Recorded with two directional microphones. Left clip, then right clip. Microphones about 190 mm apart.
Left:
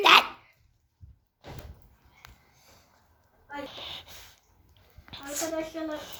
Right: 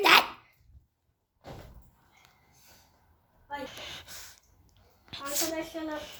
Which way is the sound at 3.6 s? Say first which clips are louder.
Left 1 dB; 15° right (ahead or behind).